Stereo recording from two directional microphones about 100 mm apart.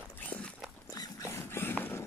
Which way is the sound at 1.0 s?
25° left (ahead or behind).